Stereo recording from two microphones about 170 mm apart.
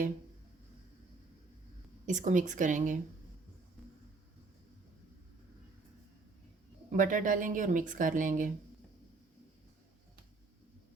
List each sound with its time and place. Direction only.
2.0 s a woman's voice: 45° right (ahead or behind)
6.9 s a woman's voice: 50° right (ahead or behind)